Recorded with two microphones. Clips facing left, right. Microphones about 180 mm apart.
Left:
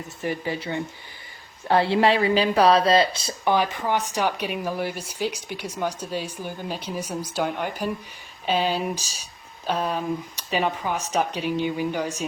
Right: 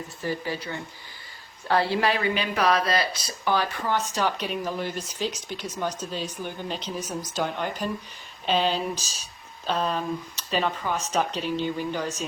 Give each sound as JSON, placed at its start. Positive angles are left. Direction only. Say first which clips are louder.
{"t": 0.2, "sound": "a woman's voice", "louder": "left 2 dB", "side_deg": 20}